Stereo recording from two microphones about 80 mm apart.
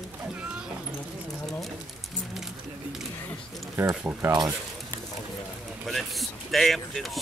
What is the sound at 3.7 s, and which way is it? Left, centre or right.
Speech, right.